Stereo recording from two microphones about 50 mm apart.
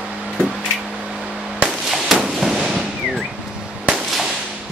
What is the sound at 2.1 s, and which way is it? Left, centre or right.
Fireworks, centre.